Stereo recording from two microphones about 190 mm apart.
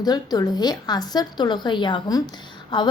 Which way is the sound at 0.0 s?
20° left (ahead or behind).